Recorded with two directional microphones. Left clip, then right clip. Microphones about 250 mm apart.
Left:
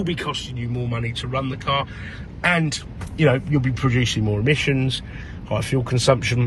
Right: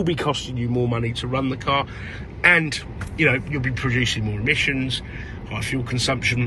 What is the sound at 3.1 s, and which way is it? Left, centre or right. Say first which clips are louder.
A man's voice: left 1 dB; centre.